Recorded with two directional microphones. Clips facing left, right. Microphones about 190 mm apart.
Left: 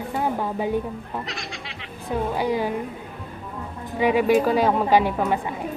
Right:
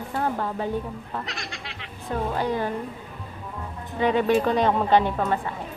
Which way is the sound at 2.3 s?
10° left (ahead or behind).